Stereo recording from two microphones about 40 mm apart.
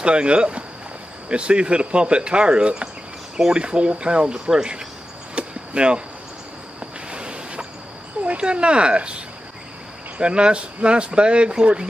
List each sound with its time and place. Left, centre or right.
0.0 s speech: right
5.3 s chop: right
7.1 s a sound: right
8.2 s speech: right